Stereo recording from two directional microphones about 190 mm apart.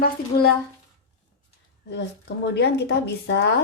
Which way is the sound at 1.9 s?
65° left (ahead or behind).